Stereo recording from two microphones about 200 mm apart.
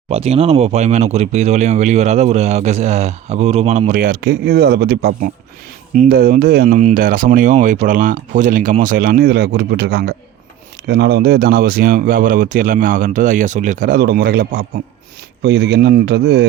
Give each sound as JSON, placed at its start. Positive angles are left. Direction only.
{"t": 0.1, "sound": "a man's voice", "side_deg": -30}